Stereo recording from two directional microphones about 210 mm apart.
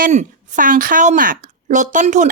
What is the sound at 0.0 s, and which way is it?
A woman's voice, 35° right (ahead or behind).